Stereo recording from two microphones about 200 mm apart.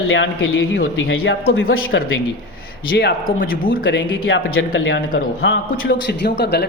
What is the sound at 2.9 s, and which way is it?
Speech, 55° left (ahead or behind).